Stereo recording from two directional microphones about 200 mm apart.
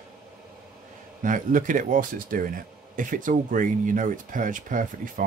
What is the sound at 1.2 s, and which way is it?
Speech, 40° right (ahead or behind).